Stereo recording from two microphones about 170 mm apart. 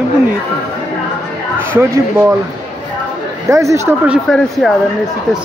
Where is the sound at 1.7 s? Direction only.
15° right (ahead or behind).